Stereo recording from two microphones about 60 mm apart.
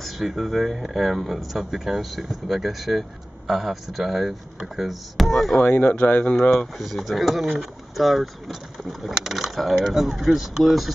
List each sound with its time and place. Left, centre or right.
0.0 s speech: centre
5.6 s speech: left
6.5 s speech: centre